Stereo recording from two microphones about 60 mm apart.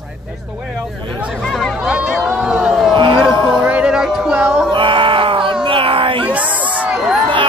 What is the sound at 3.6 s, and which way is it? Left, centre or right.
Music, right.